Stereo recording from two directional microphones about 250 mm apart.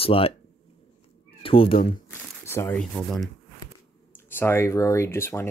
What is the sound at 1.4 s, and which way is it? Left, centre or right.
Speech, left.